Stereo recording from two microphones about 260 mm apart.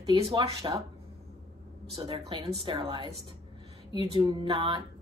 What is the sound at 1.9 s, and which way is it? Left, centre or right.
A woman's voice, right.